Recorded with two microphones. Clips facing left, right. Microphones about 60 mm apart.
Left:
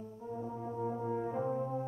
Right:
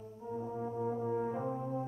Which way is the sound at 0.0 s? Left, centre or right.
Centre.